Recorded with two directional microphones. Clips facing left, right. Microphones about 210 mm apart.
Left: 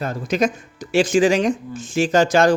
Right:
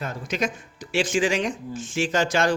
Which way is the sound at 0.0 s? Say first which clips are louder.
Left 7 dB; 35° left (ahead or behind).